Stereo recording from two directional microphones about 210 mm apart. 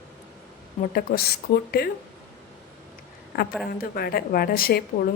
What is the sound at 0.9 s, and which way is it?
Speech, 45° left (ahead or behind).